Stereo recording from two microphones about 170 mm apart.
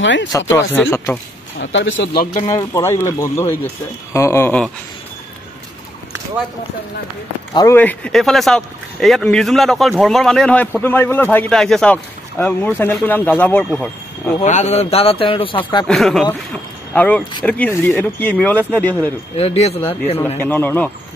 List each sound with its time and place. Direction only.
0.0 s speech: 90° left
0.5 s speech: 15° left (ahead or behind)
1.6 s speech: 90° left
2.4 s speech: 20° left (ahead or behind)
7.5 s speech: 15° left (ahead or behind)
14.4 s a man's voice: 45° left (ahead or behind)
15.9 s speech: centre (ahead or behind)
19.3 s a man's voice: 35° left (ahead or behind)
20.3 s speech: 10° left (ahead or behind)